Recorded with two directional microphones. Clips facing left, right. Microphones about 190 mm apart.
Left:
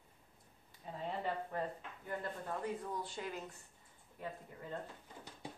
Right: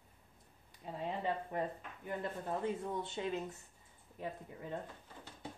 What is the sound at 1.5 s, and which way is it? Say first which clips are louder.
Speech: right 2 dB; 20° right (ahead or behind).